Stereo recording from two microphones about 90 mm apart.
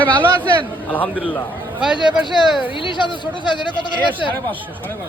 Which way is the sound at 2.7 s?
65° left (ahead or behind).